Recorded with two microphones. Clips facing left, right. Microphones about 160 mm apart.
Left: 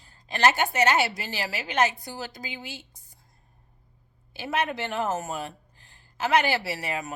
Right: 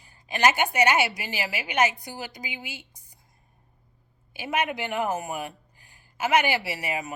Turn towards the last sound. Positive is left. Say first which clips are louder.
# even
turn(degrees=-15)  # may be behind; listen again after turning